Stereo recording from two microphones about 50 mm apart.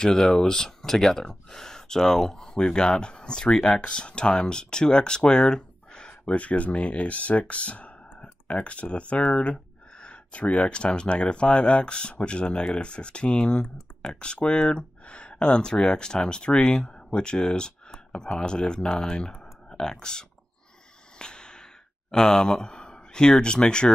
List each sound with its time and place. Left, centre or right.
0.0 s speech: centre
19.4 s clicking: centre
21.2 s a sound: centre
22.1 s speech: centre